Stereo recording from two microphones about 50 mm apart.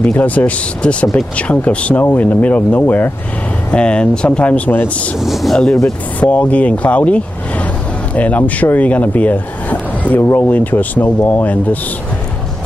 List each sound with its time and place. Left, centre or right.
0.0 s speech: left
3.7 s speech: left
4.5 s speech: left
5.2 s speech: centre
6.1 s speech: left